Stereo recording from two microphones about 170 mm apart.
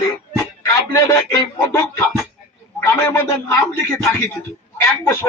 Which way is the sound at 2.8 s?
15° left (ahead or behind).